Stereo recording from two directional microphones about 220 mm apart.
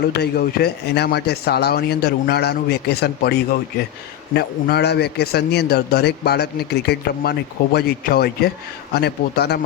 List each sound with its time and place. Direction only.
0.2 s a man's voice: 45° left (ahead or behind)
4.4 s a man's voice: 50° left (ahead or behind)